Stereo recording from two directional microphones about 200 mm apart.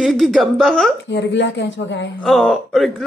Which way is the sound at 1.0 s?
60° left (ahead or behind).